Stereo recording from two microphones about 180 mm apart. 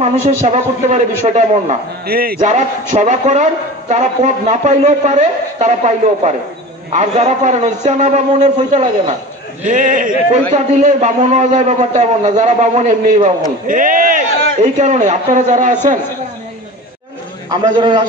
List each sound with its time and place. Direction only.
0.0 s a man's voice: 40° right (ahead or behind)
2.0 s speech: 55° right (ahead or behind)
2.4 s a man's voice: 40° right (ahead or behind)
17.5 s a man's voice: 25° right (ahead or behind)